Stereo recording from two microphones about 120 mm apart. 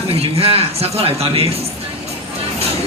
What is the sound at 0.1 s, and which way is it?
Speech, 55° right (ahead or behind).